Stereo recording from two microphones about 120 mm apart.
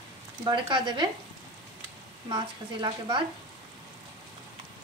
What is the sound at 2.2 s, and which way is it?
Speech, 40° right (ahead or behind).